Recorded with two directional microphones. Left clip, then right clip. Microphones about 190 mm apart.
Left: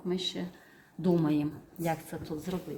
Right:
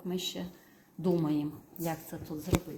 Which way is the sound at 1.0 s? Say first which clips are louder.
Left 2 dB; 10° left (ahead or behind).